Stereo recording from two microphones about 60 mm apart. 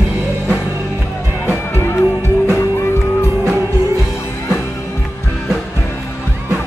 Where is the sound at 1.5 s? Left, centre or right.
Left.